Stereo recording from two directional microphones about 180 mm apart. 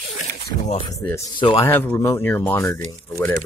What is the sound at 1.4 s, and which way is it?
Speech, 30° left (ahead or behind).